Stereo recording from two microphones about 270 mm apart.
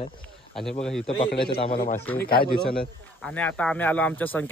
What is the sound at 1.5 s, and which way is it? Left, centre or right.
Speech, centre.